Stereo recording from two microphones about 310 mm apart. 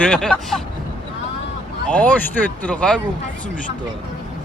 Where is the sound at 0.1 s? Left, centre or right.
Centre.